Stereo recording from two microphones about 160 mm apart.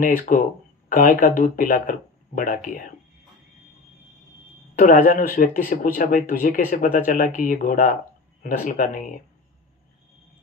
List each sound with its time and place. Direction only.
0.0 s speech: 55° left (ahead or behind)
4.7 s speech: 60° left (ahead or behind)